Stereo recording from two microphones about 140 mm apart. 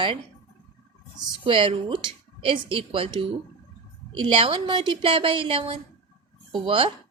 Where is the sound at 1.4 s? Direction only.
40° right (ahead or behind).